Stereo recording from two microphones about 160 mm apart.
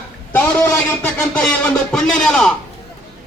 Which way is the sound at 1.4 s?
5° left (ahead or behind).